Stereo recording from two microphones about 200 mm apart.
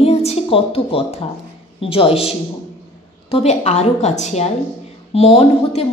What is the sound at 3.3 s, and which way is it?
A woman's voice, 35° left (ahead or behind).